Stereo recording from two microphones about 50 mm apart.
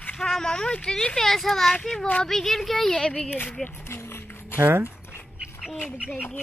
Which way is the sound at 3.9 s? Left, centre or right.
Left.